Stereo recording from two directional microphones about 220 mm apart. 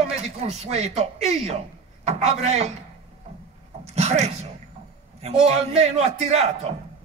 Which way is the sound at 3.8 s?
30° right (ahead or behind).